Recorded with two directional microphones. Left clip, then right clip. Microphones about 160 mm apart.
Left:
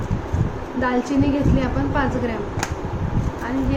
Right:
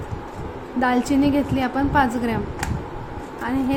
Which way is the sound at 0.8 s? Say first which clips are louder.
Right 1 dB; 90° right.